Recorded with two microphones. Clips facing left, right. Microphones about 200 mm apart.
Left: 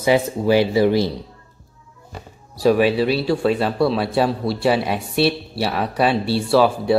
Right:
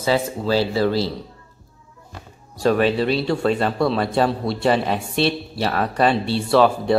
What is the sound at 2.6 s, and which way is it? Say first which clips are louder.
Speech: left 2 dB; 10° left (ahead or behind).